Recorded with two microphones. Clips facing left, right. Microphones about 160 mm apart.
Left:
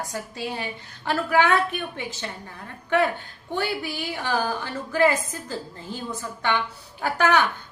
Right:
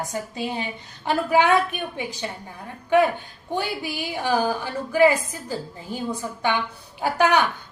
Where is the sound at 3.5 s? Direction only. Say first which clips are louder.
Even; 15° right (ahead or behind).